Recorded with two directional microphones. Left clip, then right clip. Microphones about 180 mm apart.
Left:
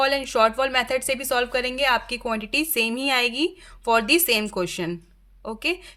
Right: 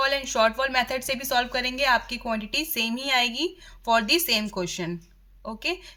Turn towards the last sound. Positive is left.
turn(degrees=35)  # may be behind; listen again after turning